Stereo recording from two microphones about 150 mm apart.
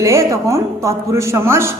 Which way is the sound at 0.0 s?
20° right (ahead or behind).